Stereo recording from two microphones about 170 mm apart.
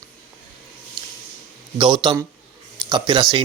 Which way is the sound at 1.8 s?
25° right (ahead or behind).